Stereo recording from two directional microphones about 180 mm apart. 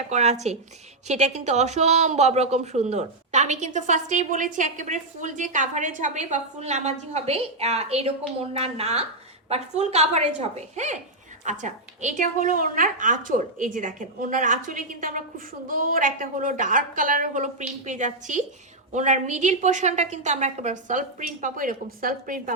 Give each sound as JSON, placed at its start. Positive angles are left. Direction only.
{"t": 0.1, "sound": "a woman's voice", "side_deg": -40}